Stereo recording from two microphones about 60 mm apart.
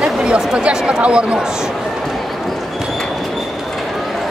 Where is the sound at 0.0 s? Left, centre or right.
Centre.